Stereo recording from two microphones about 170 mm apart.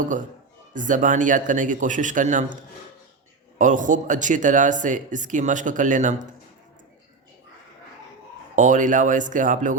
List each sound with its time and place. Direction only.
0.7 s speech: 50° right (ahead or behind)
8.5 s speech: 50° right (ahead or behind)